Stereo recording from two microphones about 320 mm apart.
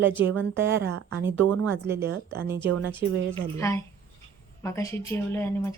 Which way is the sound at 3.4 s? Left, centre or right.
Centre.